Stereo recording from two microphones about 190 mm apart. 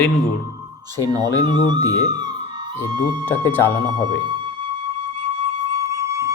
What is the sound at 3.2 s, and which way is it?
Speech, 10° left (ahead or behind).